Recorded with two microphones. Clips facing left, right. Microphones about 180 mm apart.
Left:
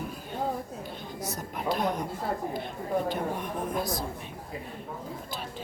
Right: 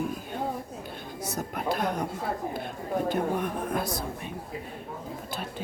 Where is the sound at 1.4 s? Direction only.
50° right (ahead or behind).